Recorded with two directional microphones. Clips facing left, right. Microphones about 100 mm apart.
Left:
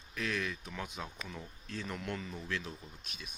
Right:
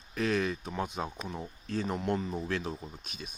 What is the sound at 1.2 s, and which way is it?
Speech, 30° right (ahead or behind).